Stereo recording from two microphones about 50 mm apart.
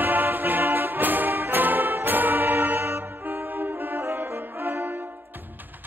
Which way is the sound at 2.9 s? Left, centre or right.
Right.